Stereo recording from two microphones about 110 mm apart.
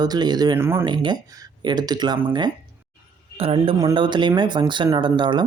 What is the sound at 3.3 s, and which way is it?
Speech, 60° right (ahead or behind).